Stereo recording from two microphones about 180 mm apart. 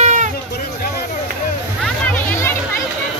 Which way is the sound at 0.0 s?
45° right (ahead or behind).